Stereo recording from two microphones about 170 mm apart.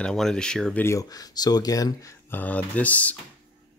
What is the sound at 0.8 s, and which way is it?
Speech, 20° left (ahead or behind).